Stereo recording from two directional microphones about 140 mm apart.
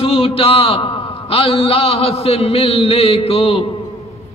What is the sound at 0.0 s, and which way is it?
A man's voice, 45° left (ahead or behind).